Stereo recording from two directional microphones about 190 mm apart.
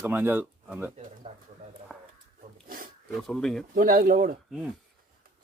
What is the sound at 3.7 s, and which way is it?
Speech, 50° right (ahead or behind).